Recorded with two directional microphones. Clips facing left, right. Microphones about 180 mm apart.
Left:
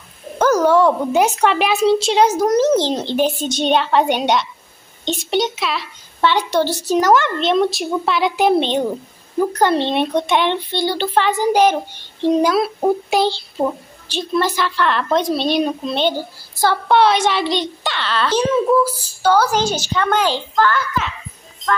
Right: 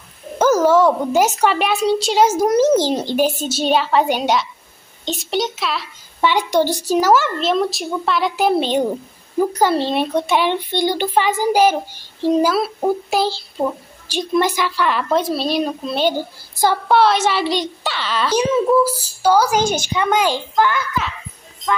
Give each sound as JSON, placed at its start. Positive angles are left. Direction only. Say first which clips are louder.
{"t": 0.4, "sound": "a child's voice", "louder": "even", "side_deg": -5}
{"t": 6.2, "sound": "a child's voice", "louder": "even", "side_deg": -15}
{"t": 14.0, "sound": "speech", "louder": "right 1 dB", "side_deg": -15}
{"t": 19.6, "sound": "a woman's voice", "louder": "right 1 dB", "side_deg": -50}
{"t": 19.9, "sound": "speech", "louder": "left 2 dB", "side_deg": -10}